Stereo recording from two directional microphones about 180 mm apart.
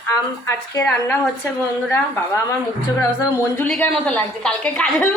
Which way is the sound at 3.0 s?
15° left (ahead or behind).